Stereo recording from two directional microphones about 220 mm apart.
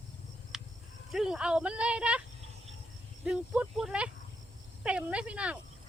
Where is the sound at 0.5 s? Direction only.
Centre (ahead or behind).